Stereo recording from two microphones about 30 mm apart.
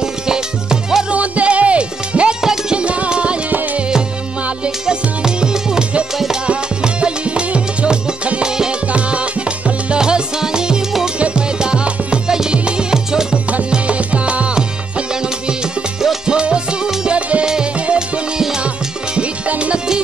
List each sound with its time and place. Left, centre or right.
0.0 s music: centre
1.1 s music: right
4.6 s music: right
6.4 s music: right
8.8 s music: right
9.9 s music: right
11.1 s music: right
12.3 s music: centre
13.8 s music: right
14.5 s music: right